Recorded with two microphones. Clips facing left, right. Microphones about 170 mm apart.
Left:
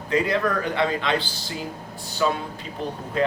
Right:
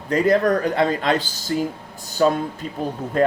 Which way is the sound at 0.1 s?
45° right (ahead or behind).